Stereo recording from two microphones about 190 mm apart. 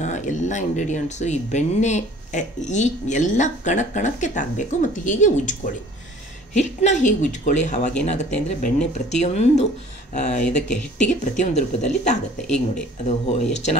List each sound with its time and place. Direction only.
0.0 s speech: 40° left (ahead or behind)